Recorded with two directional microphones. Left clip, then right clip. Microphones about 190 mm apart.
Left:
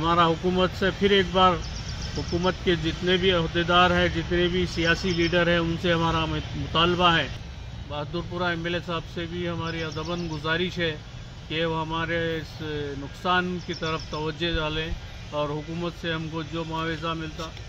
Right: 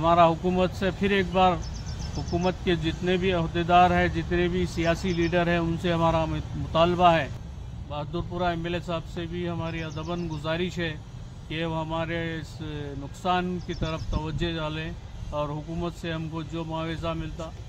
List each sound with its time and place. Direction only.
0.0 s speech: 25° right (ahead or behind)